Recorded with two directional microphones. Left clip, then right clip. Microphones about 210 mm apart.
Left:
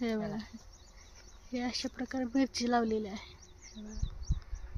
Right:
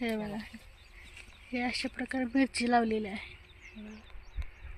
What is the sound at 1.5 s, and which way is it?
Speech, centre (ahead or behind).